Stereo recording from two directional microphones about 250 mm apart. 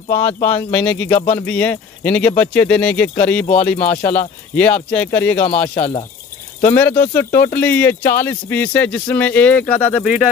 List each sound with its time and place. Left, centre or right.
0.1 s speech: left
0.5 s speech: centre
5.6 s speech: left
6.7 s speech: centre